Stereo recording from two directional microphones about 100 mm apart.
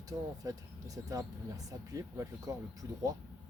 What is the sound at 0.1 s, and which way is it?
Speech, 35° right (ahead or behind).